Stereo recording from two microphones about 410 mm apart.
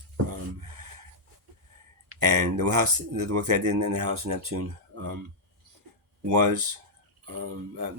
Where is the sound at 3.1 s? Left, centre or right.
Right.